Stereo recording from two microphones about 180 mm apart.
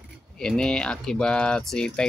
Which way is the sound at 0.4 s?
5° left (ahead or behind).